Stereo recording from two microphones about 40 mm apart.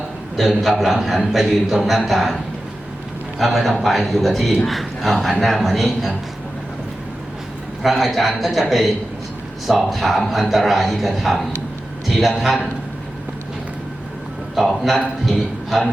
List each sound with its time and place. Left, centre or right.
0.3 s a man's voice: centre
7.8 s a man's voice: centre
14.5 s a man's voice: centre